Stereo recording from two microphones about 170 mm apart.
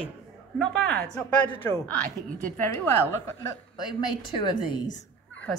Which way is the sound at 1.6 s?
15° left (ahead or behind).